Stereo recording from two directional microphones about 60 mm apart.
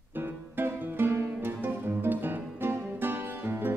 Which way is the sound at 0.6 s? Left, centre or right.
Right.